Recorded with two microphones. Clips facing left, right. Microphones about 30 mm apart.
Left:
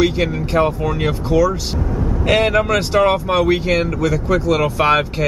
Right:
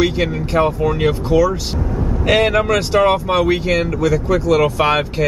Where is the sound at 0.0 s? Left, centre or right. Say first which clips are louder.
Even; centre.